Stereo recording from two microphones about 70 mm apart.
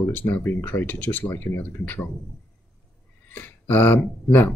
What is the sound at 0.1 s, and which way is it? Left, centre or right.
Speech, left.